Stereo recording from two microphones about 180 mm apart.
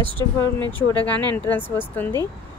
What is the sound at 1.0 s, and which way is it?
A woman's voice, 10° left (ahead or behind).